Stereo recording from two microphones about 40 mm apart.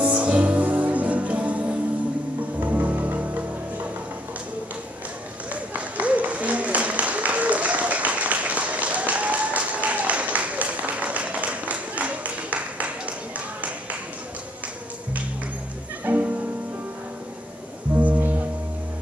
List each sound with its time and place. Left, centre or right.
0.0 s music: right
2.6 s music: right
5.5 s a sound: right
16.1 s music: right
18.0 s music: right